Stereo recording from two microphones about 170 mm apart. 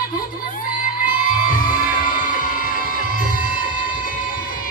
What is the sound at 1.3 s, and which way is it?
Music, 55° left (ahead or behind).